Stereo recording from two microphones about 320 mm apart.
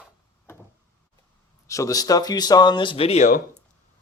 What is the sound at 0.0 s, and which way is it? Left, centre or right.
Door, centre.